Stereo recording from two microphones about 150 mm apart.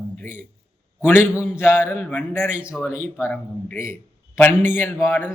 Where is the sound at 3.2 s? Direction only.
15° left (ahead or behind).